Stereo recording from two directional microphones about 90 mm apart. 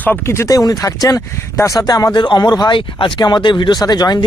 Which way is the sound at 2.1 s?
55° left (ahead or behind).